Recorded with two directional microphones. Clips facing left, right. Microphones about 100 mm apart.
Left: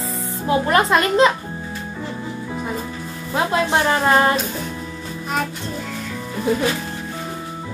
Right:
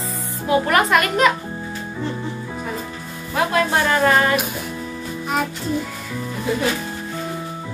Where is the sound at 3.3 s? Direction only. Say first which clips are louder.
Even; 25° left (ahead or behind).